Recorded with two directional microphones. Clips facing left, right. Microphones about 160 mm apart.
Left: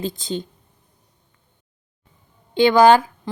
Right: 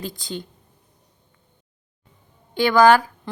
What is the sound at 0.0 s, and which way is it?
Speech, 20° left (ahead or behind).